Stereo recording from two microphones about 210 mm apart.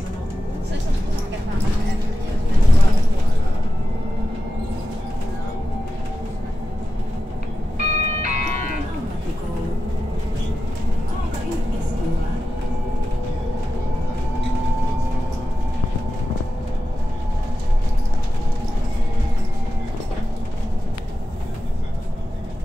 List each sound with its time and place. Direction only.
7.7 s music: 35° right (ahead or behind)